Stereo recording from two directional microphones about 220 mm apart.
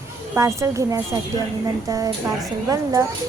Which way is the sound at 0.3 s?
15° right (ahead or behind).